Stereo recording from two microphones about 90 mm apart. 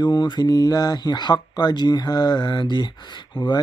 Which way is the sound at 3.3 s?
55° left (ahead or behind).